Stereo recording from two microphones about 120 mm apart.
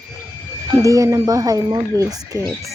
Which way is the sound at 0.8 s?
25° right (ahead or behind).